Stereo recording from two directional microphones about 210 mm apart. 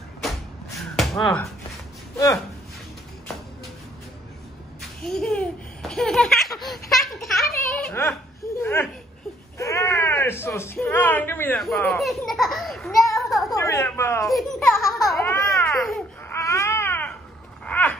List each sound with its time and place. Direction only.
0.7 s a sound: centre (ahead or behind)
5.0 s laughter: 5° left (ahead or behind)
6.9 s a sound: centre (ahead or behind)
9.6 s a child's voice: 15° left (ahead or behind)
13.6 s a woman's voice: 10° left (ahead or behind)
14.3 s laughter: centre (ahead or behind)
15.2 s a sound: 10° left (ahead or behind)
15.9 s baby cry: 10° left (ahead or behind)
17.6 s dog: 10° left (ahead or behind)